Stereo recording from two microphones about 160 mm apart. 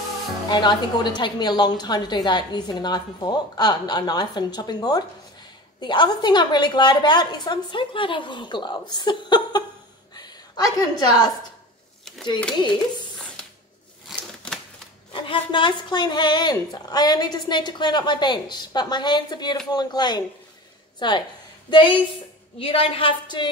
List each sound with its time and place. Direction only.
0.5 s a woman's voice: 25° left (ahead or behind)
14.0 s a sound: centre (ahead or behind)
15.1 s a woman's voice: 30° left (ahead or behind)